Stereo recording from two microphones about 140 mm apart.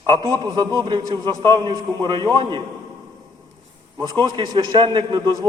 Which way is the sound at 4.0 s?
30° right (ahead or behind).